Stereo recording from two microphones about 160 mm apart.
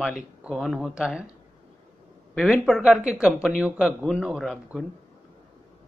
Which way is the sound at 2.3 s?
Centre (ahead or behind).